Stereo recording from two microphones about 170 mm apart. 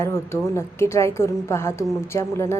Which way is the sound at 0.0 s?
15° left (ahead or behind).